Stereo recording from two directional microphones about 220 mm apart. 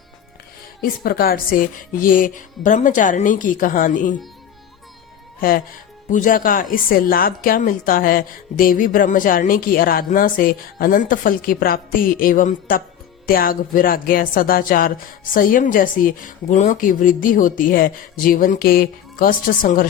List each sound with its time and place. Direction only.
0.8 s a woman's voice: 40° left (ahead or behind)
5.4 s a woman's voice: 40° left (ahead or behind)